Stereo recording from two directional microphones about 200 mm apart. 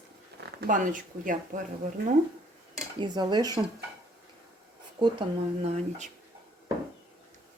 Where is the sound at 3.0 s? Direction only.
20° right (ahead or behind).